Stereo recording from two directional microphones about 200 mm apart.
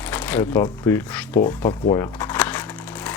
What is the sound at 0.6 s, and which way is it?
Speech, 15° left (ahead or behind).